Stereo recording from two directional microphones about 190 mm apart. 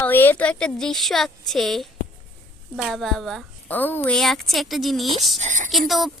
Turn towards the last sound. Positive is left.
turn(degrees=0)  # may be behind; listen again after turning